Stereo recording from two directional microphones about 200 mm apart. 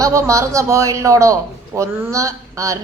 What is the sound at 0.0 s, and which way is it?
A man's voice, 15° right (ahead or behind).